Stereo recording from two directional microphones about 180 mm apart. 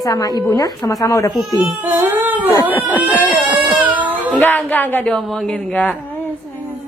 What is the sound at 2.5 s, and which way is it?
Speech, 10° left (ahead or behind).